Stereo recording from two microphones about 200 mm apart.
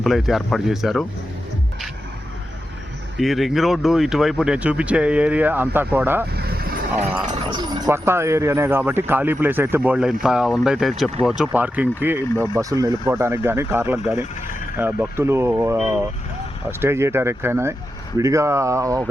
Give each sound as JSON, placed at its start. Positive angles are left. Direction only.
{"t": 0.0, "sound": "speech", "side_deg": 0}
{"t": 3.2, "sound": "speech", "side_deg": 0}
{"t": 6.3, "sound": "vehicle", "side_deg": -50}
{"t": 7.5, "sound": "speech", "side_deg": -20}
{"t": 16.8, "sound": "speech", "side_deg": -10}